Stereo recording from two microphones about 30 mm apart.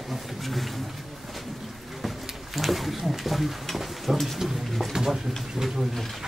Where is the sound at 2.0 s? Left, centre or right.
Centre.